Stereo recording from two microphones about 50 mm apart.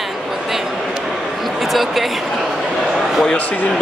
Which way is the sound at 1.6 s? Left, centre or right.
Centre.